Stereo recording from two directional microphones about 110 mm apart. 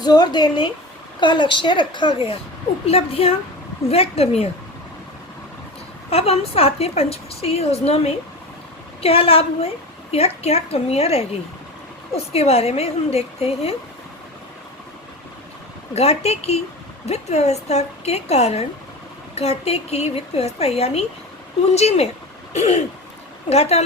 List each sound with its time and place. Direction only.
0.0 s a woman's voice: 40° left (ahead or behind)
2.8 s a woman's voice: 65° left (ahead or behind)
6.1 s a woman's voice: 65° left (ahead or behind)
16.0 s speech: 70° left (ahead or behind)